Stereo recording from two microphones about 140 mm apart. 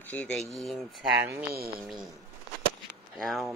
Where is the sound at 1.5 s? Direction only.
90° right.